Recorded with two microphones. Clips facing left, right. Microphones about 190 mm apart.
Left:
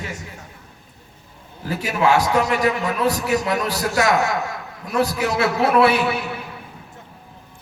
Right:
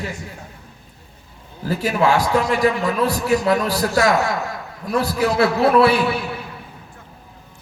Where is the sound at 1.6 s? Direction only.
35° right (ahead or behind).